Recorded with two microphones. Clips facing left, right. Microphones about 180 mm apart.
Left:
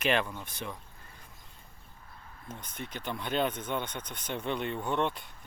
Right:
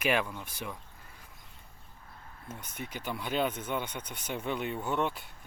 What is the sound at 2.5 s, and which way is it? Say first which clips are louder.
Speech: even; 10° right (ahead or behind).